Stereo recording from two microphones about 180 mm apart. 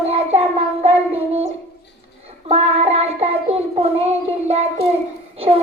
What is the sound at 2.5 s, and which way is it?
Child singing, 35° right (ahead or behind).